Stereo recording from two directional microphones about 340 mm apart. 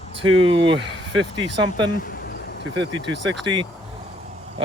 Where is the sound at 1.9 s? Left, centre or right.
Left.